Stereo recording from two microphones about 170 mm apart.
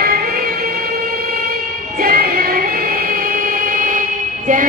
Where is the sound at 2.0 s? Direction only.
60° right (ahead or behind).